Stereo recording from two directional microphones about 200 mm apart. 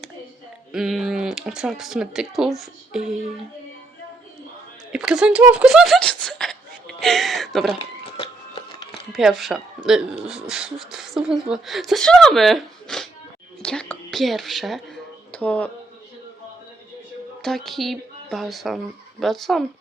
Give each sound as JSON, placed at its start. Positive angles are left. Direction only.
{"t": 0.7, "sound": "speech", "side_deg": 0}
{"t": 4.9, "sound": "speech", "side_deg": -5}
{"t": 7.8, "sound": "a sound", "side_deg": 30}
{"t": 9.1, "sound": "speech", "side_deg": 0}
{"t": 13.6, "sound": "a sound", "side_deg": 5}
{"t": 17.4, "sound": "speech", "side_deg": 0}